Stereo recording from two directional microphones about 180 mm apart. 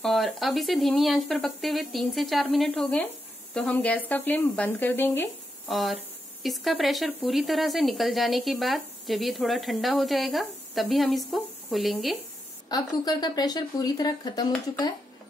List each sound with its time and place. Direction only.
0.0 s speech: centre (ahead or behind)
5.7 s speech: centre (ahead or behind)
12.6 s speech: 20° left (ahead or behind)